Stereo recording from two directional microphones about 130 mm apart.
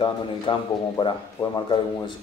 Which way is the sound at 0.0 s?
40° left (ahead or behind).